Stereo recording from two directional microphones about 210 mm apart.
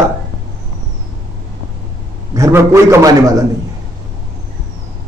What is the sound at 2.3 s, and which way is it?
A man's voice, 15° right (ahead or behind).